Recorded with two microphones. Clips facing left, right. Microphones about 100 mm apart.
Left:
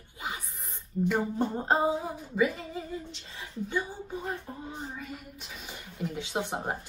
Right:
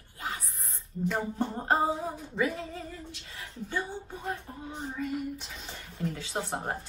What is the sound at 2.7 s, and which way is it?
Female singing, 20° left (ahead or behind).